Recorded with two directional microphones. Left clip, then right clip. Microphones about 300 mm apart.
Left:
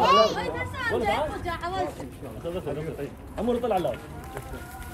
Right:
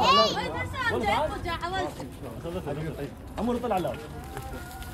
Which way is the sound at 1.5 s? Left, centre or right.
Right.